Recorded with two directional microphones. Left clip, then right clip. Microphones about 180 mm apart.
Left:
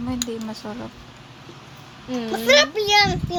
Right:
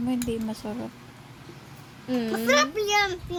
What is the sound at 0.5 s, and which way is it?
Speech, 20° right (ahead or behind).